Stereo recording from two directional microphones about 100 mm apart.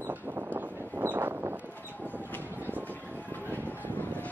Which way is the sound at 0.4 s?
20° right (ahead or behind).